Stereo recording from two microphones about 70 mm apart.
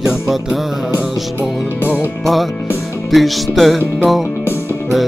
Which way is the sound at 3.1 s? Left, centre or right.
Centre.